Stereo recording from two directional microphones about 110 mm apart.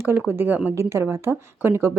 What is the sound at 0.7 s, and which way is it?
Speech, 25° right (ahead or behind).